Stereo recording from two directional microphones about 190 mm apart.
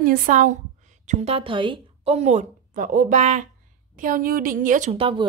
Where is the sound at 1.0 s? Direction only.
30° right (ahead or behind).